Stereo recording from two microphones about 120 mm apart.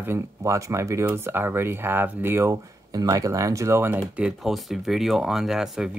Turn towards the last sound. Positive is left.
turn(degrees=-5)  # may be behind; listen again after turning